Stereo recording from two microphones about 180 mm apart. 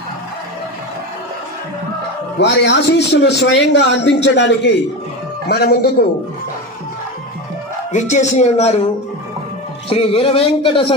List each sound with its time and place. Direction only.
2.3 s a man's voice: 75° left (ahead or behind)
5.5 s a man's voice: 60° left (ahead or behind)
7.9 s a man's voice: 40° left (ahead or behind)
9.8 s a man's voice: 30° left (ahead or behind)